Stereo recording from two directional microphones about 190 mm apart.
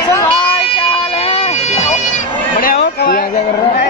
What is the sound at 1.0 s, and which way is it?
Bagpipes, 25° left (ahead or behind).